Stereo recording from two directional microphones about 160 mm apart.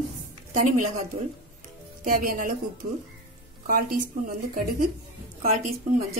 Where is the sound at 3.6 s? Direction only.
60° right (ahead or behind).